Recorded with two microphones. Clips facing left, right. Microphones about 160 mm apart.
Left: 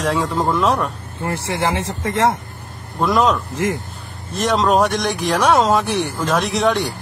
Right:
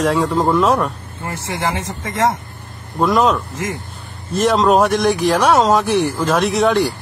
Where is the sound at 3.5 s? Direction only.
20° left (ahead or behind).